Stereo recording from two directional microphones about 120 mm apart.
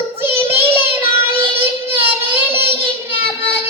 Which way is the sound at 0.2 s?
20° right (ahead or behind).